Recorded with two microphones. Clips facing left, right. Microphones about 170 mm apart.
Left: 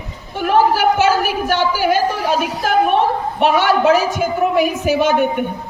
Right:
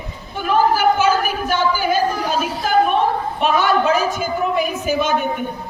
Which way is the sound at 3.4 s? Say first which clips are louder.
Left 3 dB; 75° left (ahead or behind).